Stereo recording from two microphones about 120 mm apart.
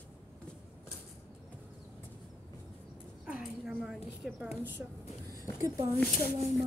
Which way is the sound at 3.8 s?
Centre (ahead or behind).